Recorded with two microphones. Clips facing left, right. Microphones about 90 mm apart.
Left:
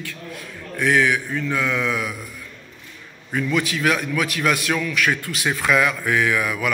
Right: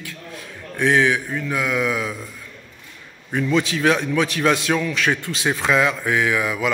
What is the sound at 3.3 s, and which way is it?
A man's voice, 25° right (ahead or behind).